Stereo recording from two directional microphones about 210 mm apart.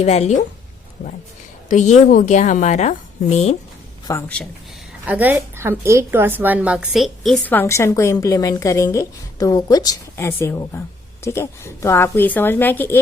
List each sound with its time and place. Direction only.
0.0 s a woman's voice: 30° left (ahead or behind)
1.7 s a woman's voice: 35° left (ahead or behind)
4.1 s a woman's voice: 15° left (ahead or behind)
5.0 s a woman's voice: 10° right (ahead or behind); by 13.0 s 10° left (ahead or behind)